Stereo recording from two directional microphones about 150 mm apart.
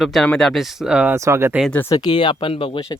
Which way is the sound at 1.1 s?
20° right (ahead or behind).